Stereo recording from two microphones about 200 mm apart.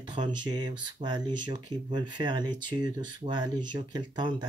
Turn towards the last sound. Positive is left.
turn(degrees=-20)  # may be behind; listen again after turning